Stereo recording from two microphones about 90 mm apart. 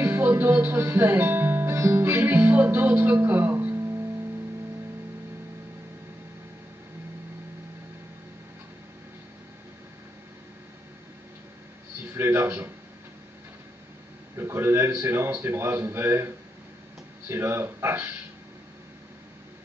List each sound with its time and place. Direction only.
0.0 s music: 25° right (ahead or behind)
12.0 s a sound: 25° right (ahead or behind)
14.3 s a man's voice: 25° right (ahead or behind)
17.3 s speech: 25° right (ahead or behind)